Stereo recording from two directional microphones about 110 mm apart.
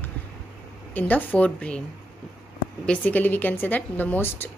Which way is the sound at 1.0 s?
15° left (ahead or behind).